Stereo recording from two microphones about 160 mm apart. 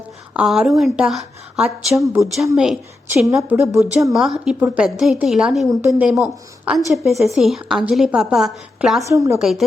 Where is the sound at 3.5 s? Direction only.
15° right (ahead or behind).